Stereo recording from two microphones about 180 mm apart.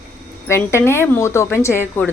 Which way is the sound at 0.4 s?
15° left (ahead or behind).